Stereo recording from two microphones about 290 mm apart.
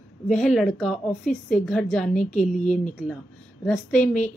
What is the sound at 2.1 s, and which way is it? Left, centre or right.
Speech, left.